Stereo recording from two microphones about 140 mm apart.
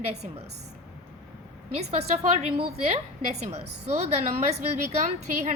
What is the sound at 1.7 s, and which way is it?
A woman's voice, 50° right (ahead or behind).